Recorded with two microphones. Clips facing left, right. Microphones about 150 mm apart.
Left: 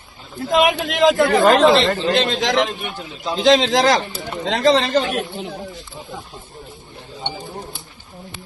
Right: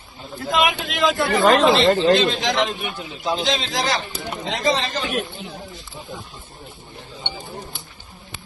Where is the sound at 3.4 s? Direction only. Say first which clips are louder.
Left 10 dB; 90° left.